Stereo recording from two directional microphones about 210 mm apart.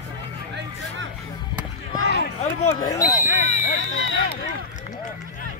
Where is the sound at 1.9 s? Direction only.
60° right (ahead or behind).